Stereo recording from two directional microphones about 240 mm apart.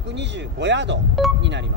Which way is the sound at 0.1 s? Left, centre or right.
Right.